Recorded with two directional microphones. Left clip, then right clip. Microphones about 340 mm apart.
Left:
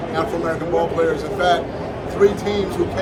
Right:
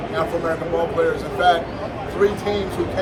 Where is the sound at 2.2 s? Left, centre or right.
Centre.